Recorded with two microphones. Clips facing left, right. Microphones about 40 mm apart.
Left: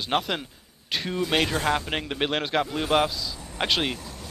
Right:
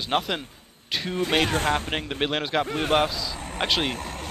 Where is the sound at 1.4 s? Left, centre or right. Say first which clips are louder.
Right 1 dB; right.